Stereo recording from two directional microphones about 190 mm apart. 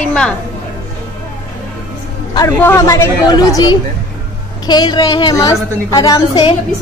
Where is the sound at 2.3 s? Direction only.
15° left (ahead or behind).